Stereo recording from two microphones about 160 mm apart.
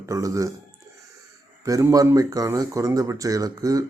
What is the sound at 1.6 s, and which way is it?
Speech, 20° right (ahead or behind).